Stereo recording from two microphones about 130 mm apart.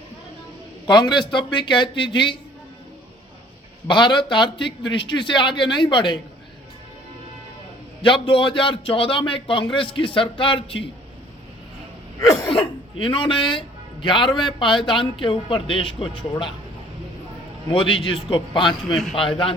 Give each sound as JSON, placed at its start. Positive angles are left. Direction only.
{"t": 0.9, "sound": "a man's voice", "side_deg": 35}
{"t": 3.8, "sound": "a man's voice", "side_deg": 35}
{"t": 8.3, "sound": "a man's voice", "side_deg": 40}
{"t": 12.5, "sound": "a man's voice", "side_deg": 45}
{"t": 17.7, "sound": "a man's voice", "side_deg": 40}
{"t": 18.9, "sound": "a man's voice", "side_deg": 0}